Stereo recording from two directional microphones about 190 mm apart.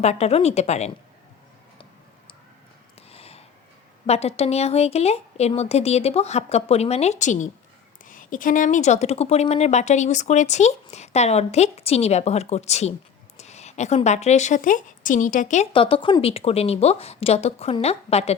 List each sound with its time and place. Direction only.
0.0 s speech: 35° left (ahead or behind)
3.1 s a sound: 30° left (ahead or behind)
4.0 s speech: 35° left (ahead or behind)
15.7 s speech: 25° left (ahead or behind)